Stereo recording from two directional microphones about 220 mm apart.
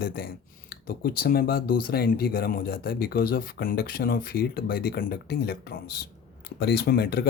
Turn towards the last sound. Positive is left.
turn(degrees=45)  # may be behind; listen again after turning